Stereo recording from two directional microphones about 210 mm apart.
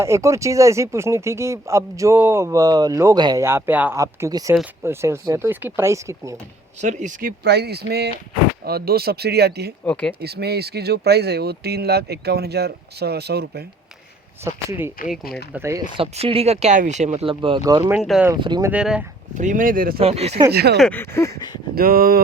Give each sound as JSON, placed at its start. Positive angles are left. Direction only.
{"t": 0.0, "sound": "speech", "side_deg": -15}
{"t": 6.8, "sound": "speech", "side_deg": -35}
{"t": 9.8, "sound": "speech", "side_deg": 5}
{"t": 10.2, "sound": "speech", "side_deg": -50}
{"t": 14.4, "sound": "speech", "side_deg": -10}
{"t": 16.0, "sound": "speech", "side_deg": -25}
{"t": 17.9, "sound": "speech", "side_deg": -5}
{"t": 18.3, "sound": "speech", "side_deg": -20}
{"t": 18.7, "sound": "speech", "side_deg": -5}
{"t": 19.3, "sound": "speech", "side_deg": -35}
{"t": 20.0, "sound": "speech", "side_deg": -30}
{"t": 20.5, "sound": "speech", "side_deg": -50}
{"t": 20.7, "sound": "speech", "side_deg": 5}
{"t": 21.8, "sound": "speech", "side_deg": -45}